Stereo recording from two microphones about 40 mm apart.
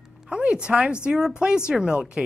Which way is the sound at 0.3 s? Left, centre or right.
Right.